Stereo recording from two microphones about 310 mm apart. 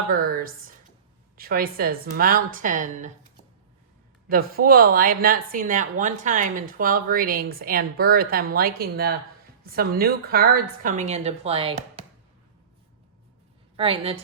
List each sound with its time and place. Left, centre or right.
0.1 s a sound: right
1.4 s speech: right
4.3 s speech: right
13.7 s a woman's voice: centre